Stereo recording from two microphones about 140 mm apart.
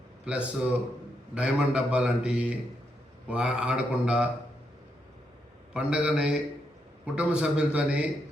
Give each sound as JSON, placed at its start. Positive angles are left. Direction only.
{"t": 0.3, "sound": "a man's voice", "side_deg": -10}
{"t": 5.7, "sound": "a man's voice", "side_deg": -5}